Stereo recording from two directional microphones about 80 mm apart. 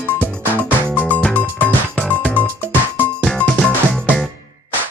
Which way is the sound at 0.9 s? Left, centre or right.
Left.